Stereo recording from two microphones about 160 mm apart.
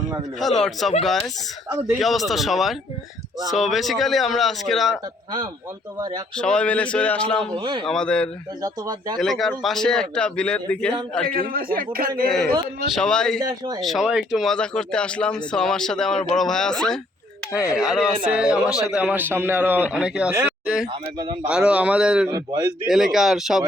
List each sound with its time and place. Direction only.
0.6 s speech: centre (ahead or behind)
2.0 s speech: centre (ahead or behind)
6.0 s speech: 25° right (ahead or behind)
6.3 s speech: 5° left (ahead or behind)
7.5 s speech: 30° right (ahead or behind)
7.9 s speech: 5° left (ahead or behind)
8.6 s speech: 25° right (ahead or behind)
9.1 s speech: centre (ahead or behind)
11.3 s a man's voice: 65° right (ahead or behind)
12.9 s speech: 5° left (ahead or behind)
13.4 s speech: 25° right (ahead or behind)
13.8 s a man's voice: centre (ahead or behind)
22.3 s speech: 25° right (ahead or behind)
22.9 s speech: centre (ahead or behind)